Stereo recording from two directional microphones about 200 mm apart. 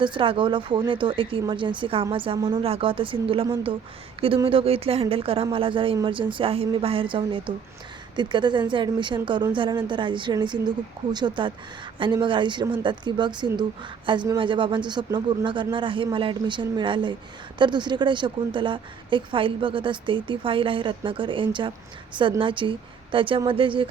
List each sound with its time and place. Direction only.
0.0 s a woman's voice: 25° right (ahead or behind)